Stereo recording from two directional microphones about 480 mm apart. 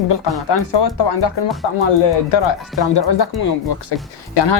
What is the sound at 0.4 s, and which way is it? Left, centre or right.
Speech, left.